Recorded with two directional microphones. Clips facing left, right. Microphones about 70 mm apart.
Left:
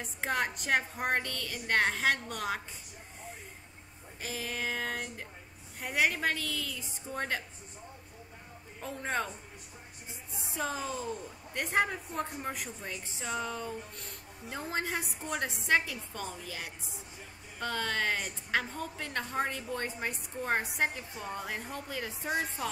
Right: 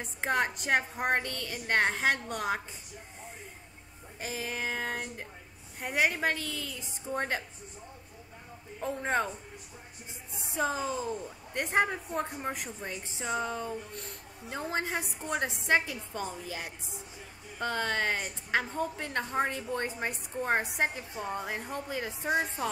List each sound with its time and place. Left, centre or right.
0.2 s a woman's voice: centre
4.2 s a woman's voice: centre
8.7 s a man's voice: centre
10.5 s a woman's voice: centre